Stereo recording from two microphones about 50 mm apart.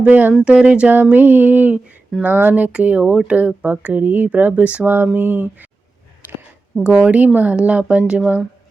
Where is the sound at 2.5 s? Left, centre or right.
Right.